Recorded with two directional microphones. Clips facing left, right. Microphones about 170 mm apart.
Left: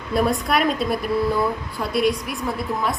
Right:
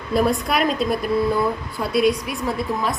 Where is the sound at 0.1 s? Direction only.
Centre (ahead or behind).